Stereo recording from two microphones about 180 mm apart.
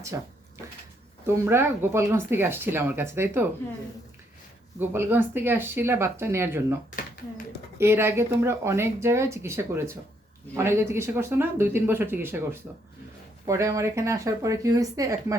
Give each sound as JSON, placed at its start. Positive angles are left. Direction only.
{"t": 0.1, "sound": "speech", "side_deg": -15}
{"t": 1.3, "sound": "speech", "side_deg": -15}
{"t": 4.8, "sound": "speech", "side_deg": -10}
{"t": 7.8, "sound": "speech", "side_deg": -15}